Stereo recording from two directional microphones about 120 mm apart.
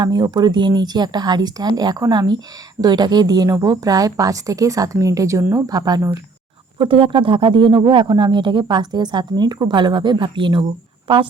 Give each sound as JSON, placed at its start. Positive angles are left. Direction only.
{"t": 0.0, "sound": "speech", "side_deg": -35}
{"t": 6.7, "sound": "speech", "side_deg": -50}